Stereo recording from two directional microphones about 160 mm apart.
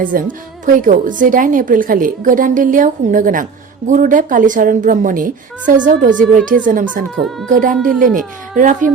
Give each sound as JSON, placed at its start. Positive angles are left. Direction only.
{"t": 0.0, "sound": "a woman's voice", "side_deg": -55}